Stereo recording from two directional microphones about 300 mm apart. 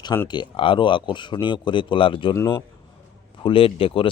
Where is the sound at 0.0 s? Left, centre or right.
Centre.